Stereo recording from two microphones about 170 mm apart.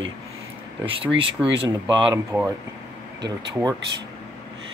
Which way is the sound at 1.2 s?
90° right.